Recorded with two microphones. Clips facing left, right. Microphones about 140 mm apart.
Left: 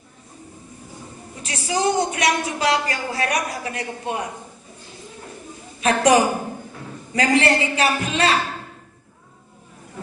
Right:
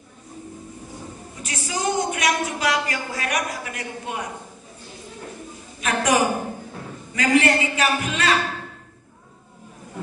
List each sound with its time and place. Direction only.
1.4 s speech: 35° left (ahead or behind)
5.8 s a man's voice: 35° left (ahead or behind)